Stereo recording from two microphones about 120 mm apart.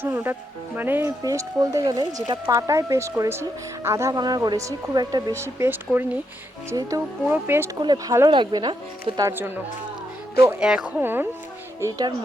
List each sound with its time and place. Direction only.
0.0 s speech: 20° right (ahead or behind)
1.2 s speech: 30° right (ahead or behind)
5.3 s speech: 20° right (ahead or behind)
6.7 s speech: 25° right (ahead or behind)
7.8 s speech: 35° right (ahead or behind)
10.3 s speech: 25° right (ahead or behind)
10.6 s speech: 5° right (ahead or behind)
11.0 s speech: 15° right (ahead or behind)
11.8 s speech: 30° right (ahead or behind)